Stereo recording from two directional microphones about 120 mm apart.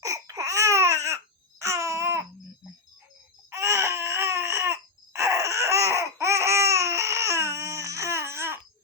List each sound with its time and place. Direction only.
0.0 s babbling: 30° right (ahead or behind)
3.5 s baby cry: 25° right (ahead or behind)